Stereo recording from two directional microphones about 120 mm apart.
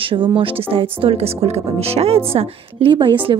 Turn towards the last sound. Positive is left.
turn(degrees=-45)  # may be behind; listen again after turning